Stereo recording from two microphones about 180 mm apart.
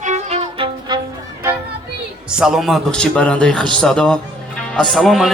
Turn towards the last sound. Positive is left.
turn(degrees=0)  # may be behind; listen again after turning